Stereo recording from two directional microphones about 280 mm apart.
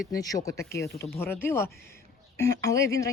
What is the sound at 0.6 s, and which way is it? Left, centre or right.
Speech, left.